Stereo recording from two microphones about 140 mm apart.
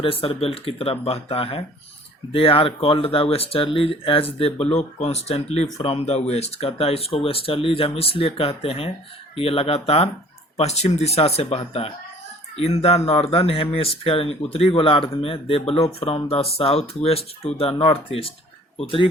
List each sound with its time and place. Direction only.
0.0 s speech: 40° left (ahead or behind)